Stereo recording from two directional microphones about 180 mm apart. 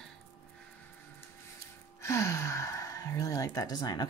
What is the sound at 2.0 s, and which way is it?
Speech, 15° left (ahead or behind).